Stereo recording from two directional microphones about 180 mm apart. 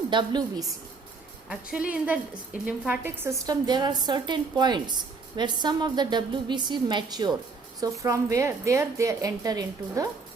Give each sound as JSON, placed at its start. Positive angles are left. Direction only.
{"t": 0.1, "sound": "a woman's voice", "side_deg": -25}
{"t": 1.5, "sound": "a woman's voice", "side_deg": -5}